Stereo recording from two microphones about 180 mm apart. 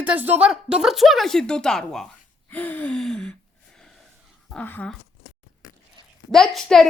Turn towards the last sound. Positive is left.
turn(degrees=0)  # may be behind; listen again after turning